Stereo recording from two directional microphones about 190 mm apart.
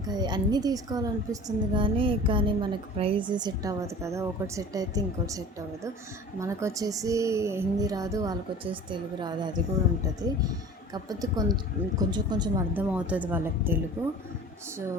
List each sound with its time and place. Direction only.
0.1 s a woman's voice: 20° right (ahead or behind)
10.9 s a woman's voice: 20° right (ahead or behind)
12.7 s speech: 10° right (ahead or behind)